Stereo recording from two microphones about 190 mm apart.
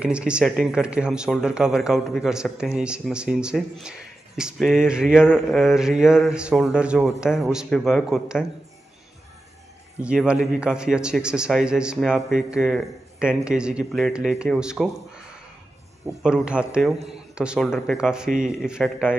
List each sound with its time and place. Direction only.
0.0 s a man's voice: 5° right (ahead or behind)
10.0 s a man's voice: 5° right (ahead or behind)